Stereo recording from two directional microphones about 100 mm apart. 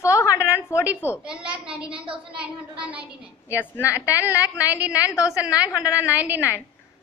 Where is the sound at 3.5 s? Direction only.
30° left (ahead or behind).